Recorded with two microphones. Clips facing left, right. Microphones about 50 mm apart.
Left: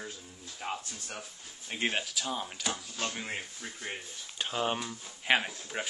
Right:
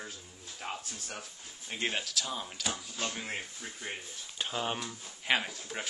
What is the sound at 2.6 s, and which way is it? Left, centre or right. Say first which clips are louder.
Speech: right 1 dB; centre.